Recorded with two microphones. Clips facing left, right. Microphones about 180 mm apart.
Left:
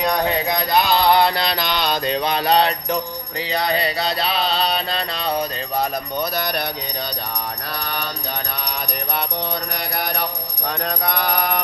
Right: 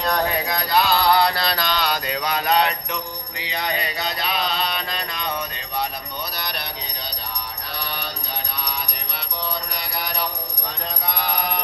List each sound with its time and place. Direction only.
0.3 s mantra: 25° left (ahead or behind)
6.3 s a sound: 50° left (ahead or behind)
7.8 s mantra: 55° left (ahead or behind)
8.6 s music: 55° left (ahead or behind)
10.7 s mantra: 60° left (ahead or behind)